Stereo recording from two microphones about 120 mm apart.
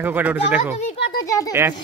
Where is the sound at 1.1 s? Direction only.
25° left (ahead or behind).